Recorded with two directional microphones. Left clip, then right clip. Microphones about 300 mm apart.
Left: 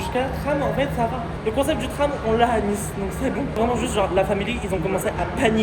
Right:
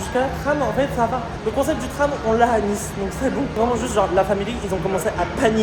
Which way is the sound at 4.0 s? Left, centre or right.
Centre.